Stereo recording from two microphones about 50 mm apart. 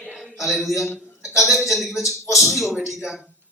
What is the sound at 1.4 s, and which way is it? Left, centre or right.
Speech, centre.